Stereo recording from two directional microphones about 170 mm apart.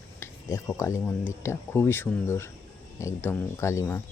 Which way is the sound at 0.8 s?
15° left (ahead or behind).